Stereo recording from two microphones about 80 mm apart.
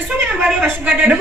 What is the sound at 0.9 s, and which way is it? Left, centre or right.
Speech, centre.